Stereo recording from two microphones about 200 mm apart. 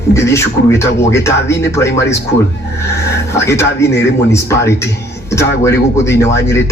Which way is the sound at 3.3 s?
15° left (ahead or behind).